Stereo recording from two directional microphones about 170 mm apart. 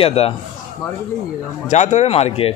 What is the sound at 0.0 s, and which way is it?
Speech, 35° left (ahead or behind).